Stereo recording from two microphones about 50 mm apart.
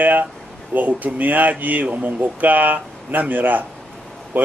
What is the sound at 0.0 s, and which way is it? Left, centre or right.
Speech, right.